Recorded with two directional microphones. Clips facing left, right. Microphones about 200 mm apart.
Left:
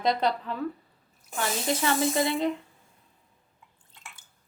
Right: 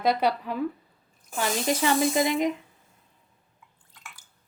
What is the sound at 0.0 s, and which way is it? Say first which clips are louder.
Speech: right 2 dB; 10° right (ahead or behind).